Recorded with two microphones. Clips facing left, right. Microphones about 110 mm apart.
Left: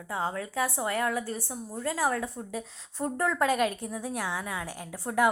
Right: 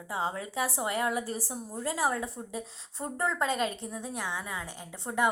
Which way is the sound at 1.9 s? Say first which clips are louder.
Left 1 dB; 15° right (ahead or behind).